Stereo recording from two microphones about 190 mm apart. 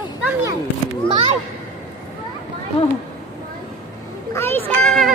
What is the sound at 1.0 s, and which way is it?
Children playing, 25° right (ahead or behind).